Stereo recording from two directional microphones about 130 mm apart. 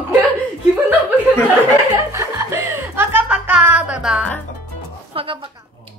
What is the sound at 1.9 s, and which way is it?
Chuckle, 25° right (ahead or behind).